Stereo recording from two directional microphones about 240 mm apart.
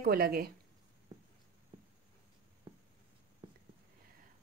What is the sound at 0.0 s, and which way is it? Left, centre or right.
Speech, right.